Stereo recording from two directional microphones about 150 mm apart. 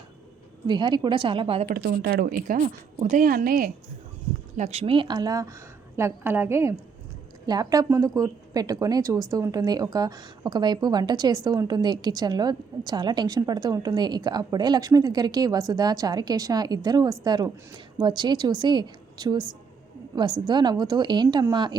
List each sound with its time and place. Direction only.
0.7 s a woman's voice: 30° right (ahead or behind)
1.6 s a woman's voice: 70° right (ahead or behind)
4.5 s a woman's voice: 50° right (ahead or behind); by 21.8 s 30° right (ahead or behind)